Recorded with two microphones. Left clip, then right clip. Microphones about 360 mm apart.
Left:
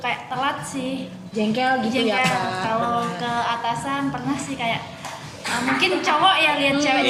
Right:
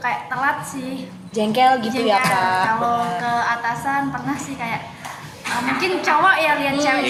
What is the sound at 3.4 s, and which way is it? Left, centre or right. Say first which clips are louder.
Speech: right 2 dB; centre.